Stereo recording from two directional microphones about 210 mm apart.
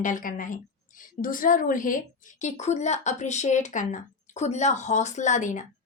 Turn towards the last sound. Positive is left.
turn(degrees=35)  # may be behind; listen again after turning